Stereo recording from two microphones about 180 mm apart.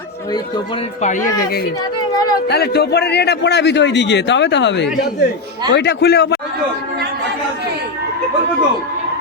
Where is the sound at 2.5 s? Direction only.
65° left (ahead or behind).